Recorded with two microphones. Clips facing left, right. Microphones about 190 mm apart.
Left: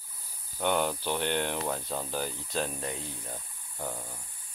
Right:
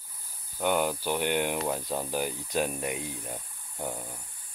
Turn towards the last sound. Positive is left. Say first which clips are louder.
# right 2 dB
turn(degrees=-15)  # may be behind; listen again after turning